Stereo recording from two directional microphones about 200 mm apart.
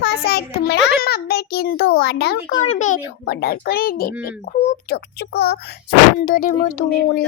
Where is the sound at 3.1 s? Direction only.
55° left (ahead or behind).